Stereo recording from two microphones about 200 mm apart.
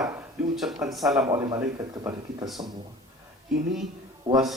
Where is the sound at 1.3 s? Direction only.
15° right (ahead or behind).